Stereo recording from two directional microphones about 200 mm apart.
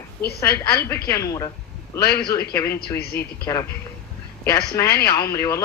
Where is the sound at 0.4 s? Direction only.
15° left (ahead or behind).